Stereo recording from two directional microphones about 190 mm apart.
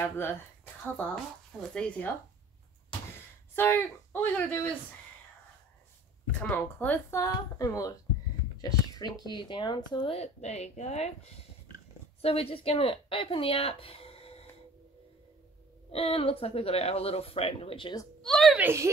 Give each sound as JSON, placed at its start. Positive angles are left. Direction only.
{"t": 0.8, "sound": "a woman's voice", "side_deg": 10}
{"t": 3.5, "sound": "a woman's voice", "side_deg": 10}
{"t": 6.4, "sound": "a woman's voice", "side_deg": 10}
{"t": 12.2, "sound": "speech", "side_deg": 30}
{"t": 15.9, "sound": "speech", "side_deg": 30}
{"t": 18.2, "sound": "a woman's voice", "side_deg": 0}
{"t": 18.6, "sound": "a woman's voice", "side_deg": -15}